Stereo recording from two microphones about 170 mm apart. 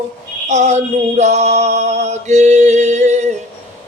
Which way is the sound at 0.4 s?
40° right (ahead or behind).